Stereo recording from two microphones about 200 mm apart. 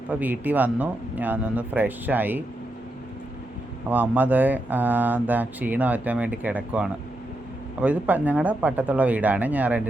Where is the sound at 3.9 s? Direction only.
10° right (ahead or behind).